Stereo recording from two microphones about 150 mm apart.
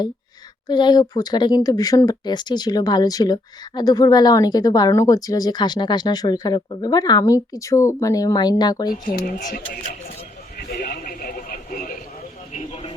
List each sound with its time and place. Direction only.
0.7 s speech: 30° left (ahead or behind)
9.0 s speech: 70° left (ahead or behind)
10.6 s radio: 85° left; by 11.9 s 65° left (ahead or behind)
12.5 s a sound: 50° left (ahead or behind)